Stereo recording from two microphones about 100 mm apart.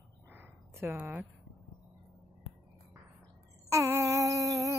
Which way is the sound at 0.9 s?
15° right (ahead or behind).